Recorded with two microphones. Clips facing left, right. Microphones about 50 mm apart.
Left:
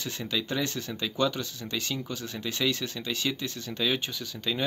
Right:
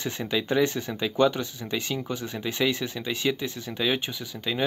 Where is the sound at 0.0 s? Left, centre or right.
Right.